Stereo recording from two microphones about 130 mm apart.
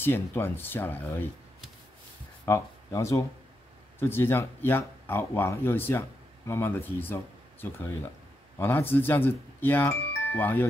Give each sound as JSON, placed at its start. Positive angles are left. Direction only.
{"t": 0.0, "sound": "speech", "side_deg": 15}
{"t": 2.4, "sound": "speech", "side_deg": 20}